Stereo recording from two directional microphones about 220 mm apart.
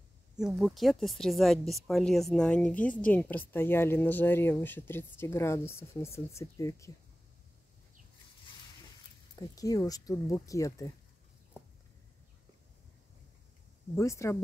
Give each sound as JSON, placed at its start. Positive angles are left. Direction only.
{"t": 0.4, "sound": "speech", "side_deg": 0}
{"t": 9.3, "sound": "speech", "side_deg": 15}
{"t": 13.9, "sound": "speech", "side_deg": 15}